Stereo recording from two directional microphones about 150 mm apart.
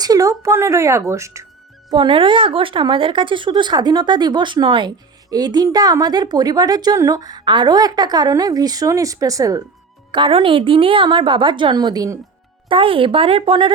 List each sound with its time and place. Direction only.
0.0 s speech: 25° right (ahead or behind)
1.9 s speech: 35° right (ahead or behind)
10.1 s speech: 35° right (ahead or behind)
12.6 s speech: 35° right (ahead or behind)